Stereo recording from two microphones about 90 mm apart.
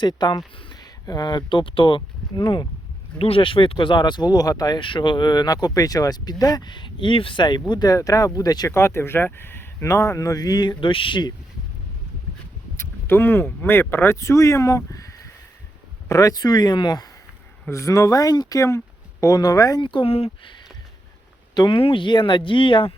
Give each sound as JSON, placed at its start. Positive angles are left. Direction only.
{"t": 0.0, "sound": "speech", "side_deg": 55}
{"t": 3.2, "sound": "speech", "side_deg": 90}
{"t": 4.8, "sound": "speech", "side_deg": 65}
{"t": 7.7, "sound": "speech", "side_deg": 45}
{"t": 8.7, "sound": "speech", "side_deg": 30}
{"t": 12.7, "sound": "speech", "side_deg": 25}
{"t": 17.7, "sound": "speech", "side_deg": 35}
{"t": 19.8, "sound": "speech", "side_deg": 70}
{"t": 21.5, "sound": "speech", "side_deg": 50}
{"t": 21.8, "sound": "speech", "side_deg": 75}